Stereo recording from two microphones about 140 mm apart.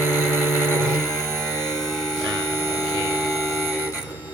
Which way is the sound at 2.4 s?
20° right (ahead or behind).